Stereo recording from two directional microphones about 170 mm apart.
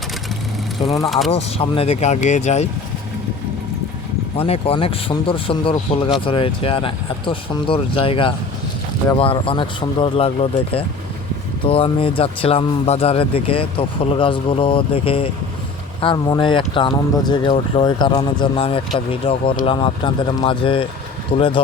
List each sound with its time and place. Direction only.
0.9 s speech: centre (ahead or behind)
1.3 s speech: 35° left (ahead or behind)
4.4 s speech: 35° left (ahead or behind)